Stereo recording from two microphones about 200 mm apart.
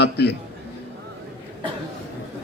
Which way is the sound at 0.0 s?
55° left (ahead or behind).